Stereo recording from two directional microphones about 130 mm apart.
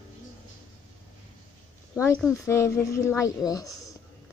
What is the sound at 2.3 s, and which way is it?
Speech, 20° left (ahead or behind).